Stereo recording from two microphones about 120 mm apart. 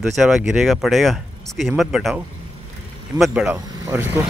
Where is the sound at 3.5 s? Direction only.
30° right (ahead or behind).